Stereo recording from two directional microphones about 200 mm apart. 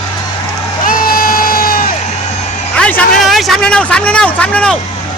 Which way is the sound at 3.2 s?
Centre (ahead or behind).